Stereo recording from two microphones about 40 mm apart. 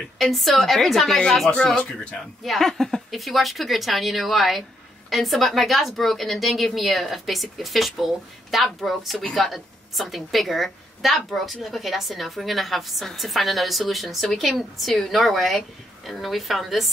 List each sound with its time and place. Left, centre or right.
0.2 s a woman's voice: centre
1.8 s speech: left
2.4 s a woman's voice: centre